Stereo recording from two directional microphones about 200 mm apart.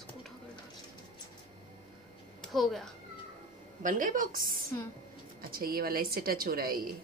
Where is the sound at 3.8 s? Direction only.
40° right (ahead or behind).